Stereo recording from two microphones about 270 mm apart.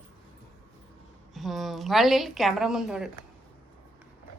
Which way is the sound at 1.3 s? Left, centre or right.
Centre.